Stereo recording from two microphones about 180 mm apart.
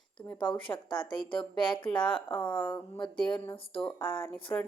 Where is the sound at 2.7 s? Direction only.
25° left (ahead or behind).